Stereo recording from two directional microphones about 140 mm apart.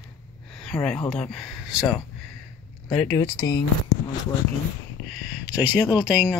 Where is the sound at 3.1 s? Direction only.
30° left (ahead or behind).